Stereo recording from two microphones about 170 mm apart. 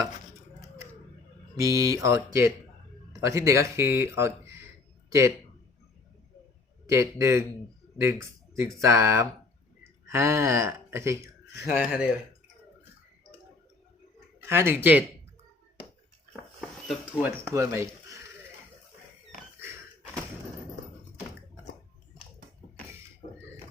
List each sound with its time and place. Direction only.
1.5 s speech: 20° right (ahead or behind)
6.8 s speech: 15° right (ahead or behind)
11.7 s speech: 5° right (ahead or behind)
14.4 s speech: 15° right (ahead or behind)
16.3 s a sound: 5° right (ahead or behind)